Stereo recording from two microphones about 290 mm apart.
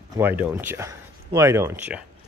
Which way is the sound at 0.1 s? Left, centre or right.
Centre.